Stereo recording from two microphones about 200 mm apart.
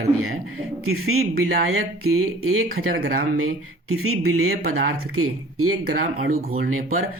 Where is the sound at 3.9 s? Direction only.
90° right.